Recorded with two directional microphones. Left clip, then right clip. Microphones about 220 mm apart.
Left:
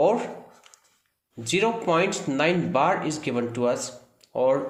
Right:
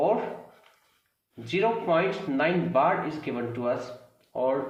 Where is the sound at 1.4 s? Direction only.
55° left (ahead or behind).